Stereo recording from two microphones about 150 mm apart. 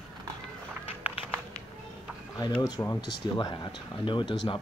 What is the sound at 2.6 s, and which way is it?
Speech, 25° left (ahead or behind).